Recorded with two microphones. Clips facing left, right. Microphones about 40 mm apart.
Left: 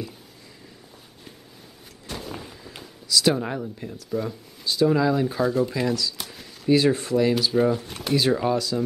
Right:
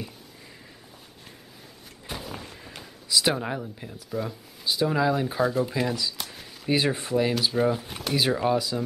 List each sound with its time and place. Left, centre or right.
2.0 s artillery fire: centre
3.1 s speech: right
3.3 s speech: centre
6.1 s a sound: centre
6.7 s speech: centre
8.5 s speech: centre